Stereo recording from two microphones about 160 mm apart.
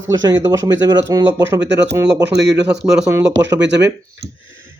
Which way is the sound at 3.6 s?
90° right.